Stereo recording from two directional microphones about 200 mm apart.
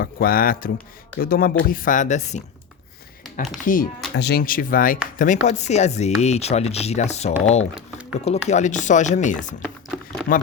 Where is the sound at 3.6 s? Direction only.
45° left (ahead or behind).